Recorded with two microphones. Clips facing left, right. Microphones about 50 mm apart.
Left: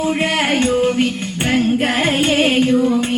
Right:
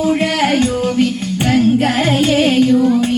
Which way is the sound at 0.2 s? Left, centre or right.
Centre.